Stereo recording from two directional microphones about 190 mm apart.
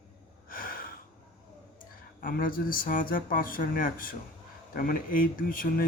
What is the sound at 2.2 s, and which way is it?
Speech, 45° left (ahead or behind).